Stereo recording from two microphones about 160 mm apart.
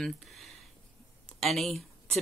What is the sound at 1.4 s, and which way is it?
Speech, centre (ahead or behind).